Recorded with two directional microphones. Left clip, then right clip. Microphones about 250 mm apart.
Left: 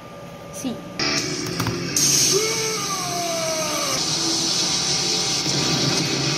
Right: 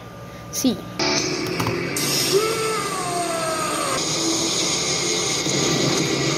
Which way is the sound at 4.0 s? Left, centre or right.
Centre.